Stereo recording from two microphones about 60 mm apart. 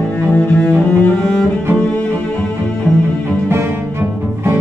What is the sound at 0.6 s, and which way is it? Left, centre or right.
Cello, left.